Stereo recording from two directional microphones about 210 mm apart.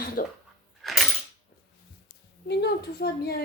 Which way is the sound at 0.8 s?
Centre (ahead or behind).